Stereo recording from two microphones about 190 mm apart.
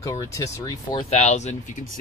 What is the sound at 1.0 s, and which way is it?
Speech, 35° left (ahead or behind).